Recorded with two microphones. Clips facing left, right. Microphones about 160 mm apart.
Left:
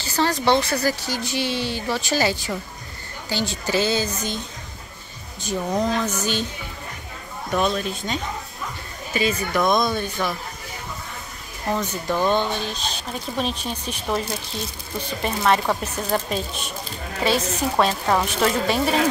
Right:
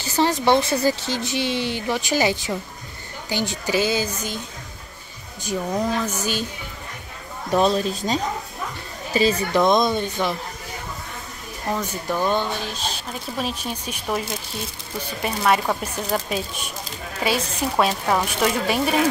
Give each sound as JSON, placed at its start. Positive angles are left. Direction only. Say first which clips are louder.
{"t": 0.1, "sound": "a woman's voice", "louder": "right 1 dB", "side_deg": -20}
{"t": 5.9, "sound": "a woman's voice", "louder": "left 1 dB", "side_deg": -10}
{"t": 7.5, "sound": "speech", "louder": "right 4 dB", "side_deg": -35}
{"t": 11.7, "sound": "a woman's voice", "louder": "left 1 dB", "side_deg": -5}